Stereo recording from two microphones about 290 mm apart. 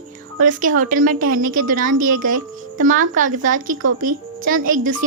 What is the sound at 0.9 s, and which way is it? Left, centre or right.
Speech, right.